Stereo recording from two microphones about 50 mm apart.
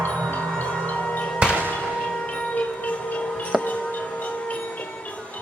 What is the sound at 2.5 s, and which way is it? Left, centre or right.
Train, left.